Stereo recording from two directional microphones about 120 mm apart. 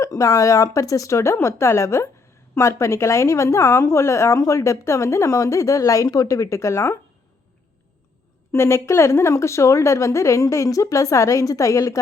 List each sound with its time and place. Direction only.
0.0 s a woman's voice: 25° left (ahead or behind)
8.5 s a woman's voice: 25° left (ahead or behind)